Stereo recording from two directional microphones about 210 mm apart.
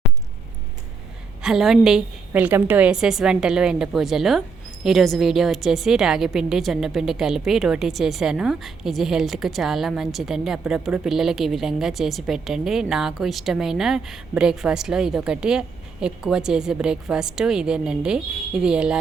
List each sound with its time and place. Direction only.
1.4 s a woman's voice: centre (ahead or behind)